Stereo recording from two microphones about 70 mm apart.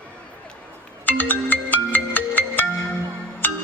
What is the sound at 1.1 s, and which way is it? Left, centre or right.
Music, left.